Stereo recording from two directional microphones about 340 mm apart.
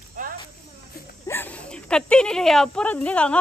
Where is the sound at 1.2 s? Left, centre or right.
Centre.